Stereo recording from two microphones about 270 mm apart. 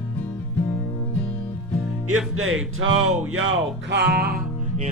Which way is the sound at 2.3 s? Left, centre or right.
Right.